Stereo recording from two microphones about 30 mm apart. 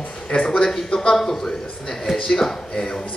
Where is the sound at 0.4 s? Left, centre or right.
Left.